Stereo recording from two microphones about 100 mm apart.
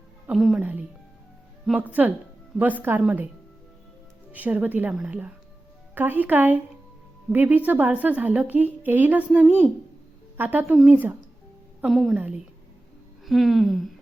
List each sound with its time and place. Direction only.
0.3 s speech: 5° right (ahead or behind)
0.6 s speech: 15° right (ahead or behind)
1.9 s a woman's voice: 15° right (ahead or behind)
4.3 s a woman's voice: 15° right (ahead or behind)
11.9 s speech: centre (ahead or behind)
12.1 s a woman's voice: 15° right (ahead or behind)
13.2 s speech: centre (ahead or behind)